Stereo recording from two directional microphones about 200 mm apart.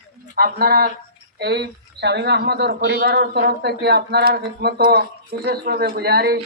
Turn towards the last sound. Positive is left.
turn(degrees=-50)  # may be behind; listen again after turning